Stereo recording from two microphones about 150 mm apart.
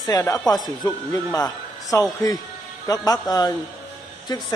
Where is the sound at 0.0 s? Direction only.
25° left (ahead or behind).